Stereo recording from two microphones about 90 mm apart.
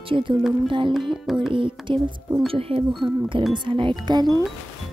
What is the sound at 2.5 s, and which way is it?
Speech, 90° right.